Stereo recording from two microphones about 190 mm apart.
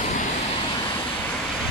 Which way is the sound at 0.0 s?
40° left (ahead or behind).